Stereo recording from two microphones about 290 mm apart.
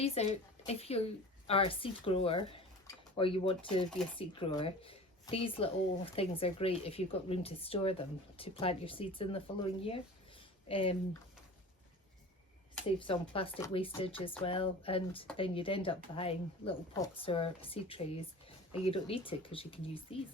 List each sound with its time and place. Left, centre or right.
0.0 s a woman's voice: left
13.0 s speech: centre